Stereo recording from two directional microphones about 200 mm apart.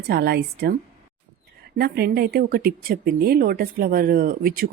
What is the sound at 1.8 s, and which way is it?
Speech, 50° right (ahead or behind).